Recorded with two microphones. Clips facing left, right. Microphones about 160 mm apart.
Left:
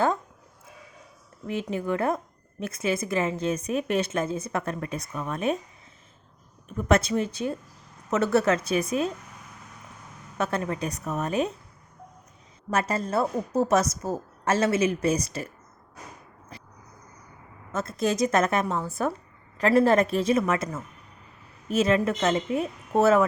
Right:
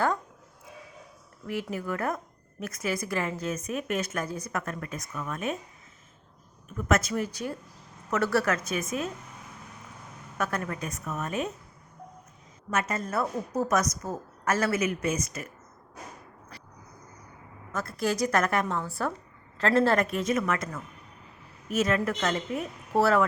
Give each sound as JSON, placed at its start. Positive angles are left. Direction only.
{"t": 1.5, "sound": "a woman's voice", "side_deg": 20}
{"t": 6.7, "sound": "a woman's voice", "side_deg": 30}
{"t": 10.3, "sound": "a woman's voice", "side_deg": 25}
{"t": 10.8, "sound": "a woman's voice", "side_deg": 35}
{"t": 12.7, "sound": "a woman's voice", "side_deg": 35}
{"t": 17.7, "sound": "a woman's voice", "side_deg": 25}
{"t": 21.7, "sound": "a woman's voice", "side_deg": 30}